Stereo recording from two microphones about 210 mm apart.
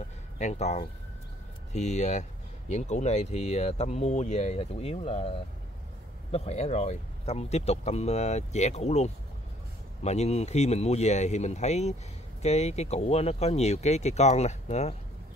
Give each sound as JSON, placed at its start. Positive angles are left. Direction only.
{"t": 0.4, "sound": "speech", "side_deg": 35}
{"t": 6.3, "sound": "speech", "side_deg": 30}